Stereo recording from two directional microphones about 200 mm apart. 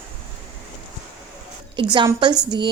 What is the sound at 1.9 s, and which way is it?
Speech, 20° right (ahead or behind).